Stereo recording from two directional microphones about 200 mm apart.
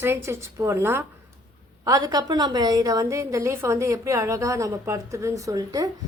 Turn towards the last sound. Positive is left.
turn(degrees=-20)  # may be behind; listen again after turning